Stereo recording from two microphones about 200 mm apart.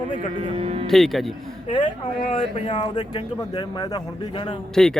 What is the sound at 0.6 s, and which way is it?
Speech, 30° right (ahead or behind).